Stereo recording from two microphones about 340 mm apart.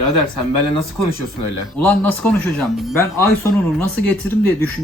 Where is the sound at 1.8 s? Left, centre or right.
Centre.